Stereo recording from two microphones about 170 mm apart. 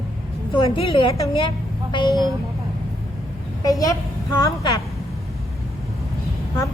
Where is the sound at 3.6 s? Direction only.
20° left (ahead or behind).